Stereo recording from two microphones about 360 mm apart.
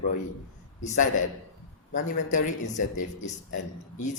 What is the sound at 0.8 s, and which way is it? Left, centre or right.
Speech, centre.